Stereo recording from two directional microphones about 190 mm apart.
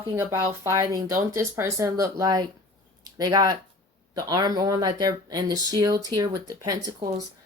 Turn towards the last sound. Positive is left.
turn(degrees=-20)  # may be behind; listen again after turning